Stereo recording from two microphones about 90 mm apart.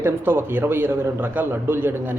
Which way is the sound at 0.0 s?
25° right (ahead or behind).